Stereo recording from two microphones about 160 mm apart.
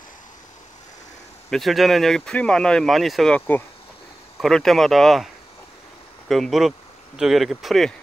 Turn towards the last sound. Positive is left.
turn(degrees=0)  # may be behind; listen again after turning